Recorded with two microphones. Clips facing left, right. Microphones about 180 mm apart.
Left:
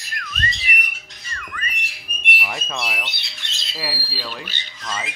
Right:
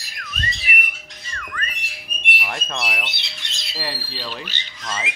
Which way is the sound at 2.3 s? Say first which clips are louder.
Even; centre (ahead or behind).